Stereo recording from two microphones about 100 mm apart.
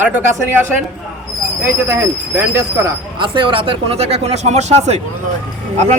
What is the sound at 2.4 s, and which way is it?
Speech, 30° right (ahead or behind).